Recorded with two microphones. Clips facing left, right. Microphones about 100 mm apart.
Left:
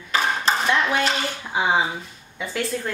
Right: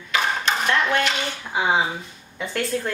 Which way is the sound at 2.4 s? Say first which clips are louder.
Right 1 dB; centre (ahead or behind).